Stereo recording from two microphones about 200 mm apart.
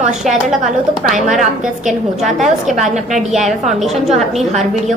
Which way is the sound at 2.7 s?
35° right (ahead or behind).